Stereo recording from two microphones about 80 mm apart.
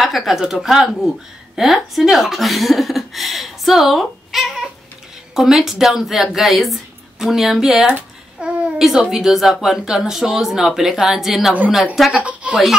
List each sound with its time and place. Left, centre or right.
0.0 s speech: centre
12.1 s a woman's voice: centre